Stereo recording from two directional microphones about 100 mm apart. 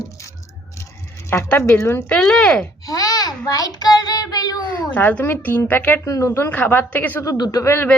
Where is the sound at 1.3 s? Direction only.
25° left (ahead or behind).